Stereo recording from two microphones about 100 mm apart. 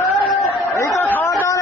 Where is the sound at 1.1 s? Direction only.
20° left (ahead or behind).